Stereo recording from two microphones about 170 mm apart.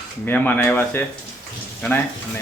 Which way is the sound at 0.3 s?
10° left (ahead or behind).